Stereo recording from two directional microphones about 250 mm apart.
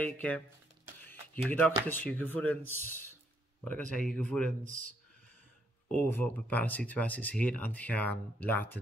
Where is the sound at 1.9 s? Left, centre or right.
Centre.